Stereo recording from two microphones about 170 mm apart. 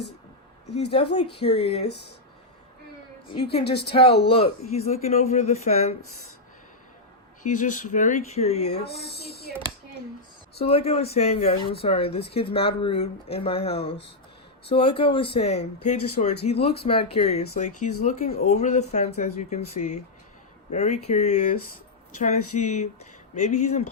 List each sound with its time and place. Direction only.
0.8 s speech: 35° left (ahead or behind)
3.2 s speech: 35° left (ahead or behind)
7.4 s speech: 50° left (ahead or behind)
8.7 s a sound: 70° left (ahead or behind)
10.6 s speech: 35° left (ahead or behind)